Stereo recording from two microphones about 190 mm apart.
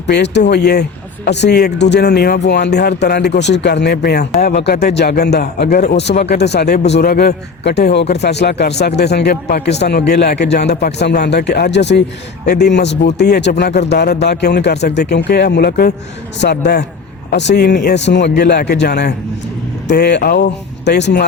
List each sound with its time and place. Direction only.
0.1 s a man's voice: 60° left (ahead or behind)